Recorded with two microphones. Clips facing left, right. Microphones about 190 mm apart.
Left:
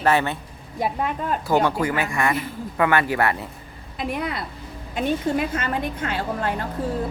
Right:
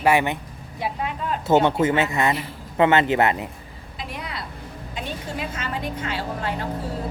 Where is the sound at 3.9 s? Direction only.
55° left (ahead or behind).